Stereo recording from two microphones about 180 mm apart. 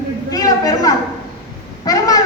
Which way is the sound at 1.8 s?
20° left (ahead or behind).